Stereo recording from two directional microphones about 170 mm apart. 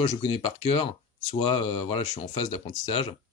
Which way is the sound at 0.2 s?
30° left (ahead or behind).